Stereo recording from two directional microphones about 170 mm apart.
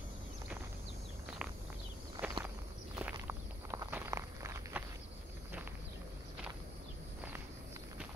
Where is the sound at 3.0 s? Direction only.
15° right (ahead or behind).